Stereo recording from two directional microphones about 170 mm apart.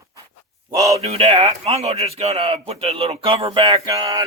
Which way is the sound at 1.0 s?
35° right (ahead or behind).